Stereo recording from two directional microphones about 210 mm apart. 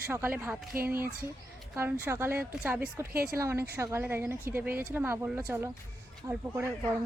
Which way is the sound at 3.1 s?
45° right (ahead or behind).